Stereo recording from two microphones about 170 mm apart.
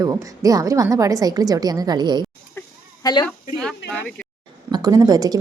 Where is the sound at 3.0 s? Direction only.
25° left (ahead or behind).